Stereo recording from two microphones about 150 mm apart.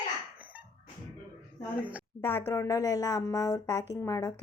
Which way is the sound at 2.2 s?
20° left (ahead or behind).